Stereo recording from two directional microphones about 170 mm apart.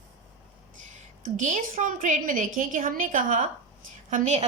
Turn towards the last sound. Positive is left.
turn(degrees=-45)  # may be behind; listen again after turning